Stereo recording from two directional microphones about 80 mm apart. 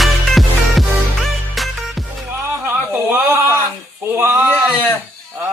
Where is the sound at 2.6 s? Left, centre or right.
Right.